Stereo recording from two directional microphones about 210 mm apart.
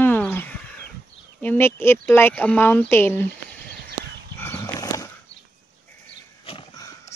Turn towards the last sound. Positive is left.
turn(degrees=25)  # may be behind; listen again after turning